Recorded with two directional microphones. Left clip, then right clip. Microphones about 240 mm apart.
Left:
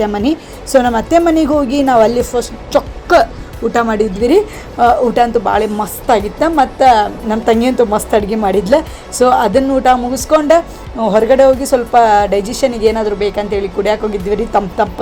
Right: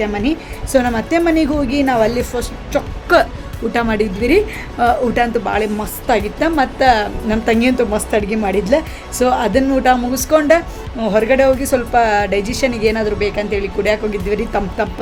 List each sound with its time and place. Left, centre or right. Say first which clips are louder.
0.0 s a woman's voice: left 4 dB; centre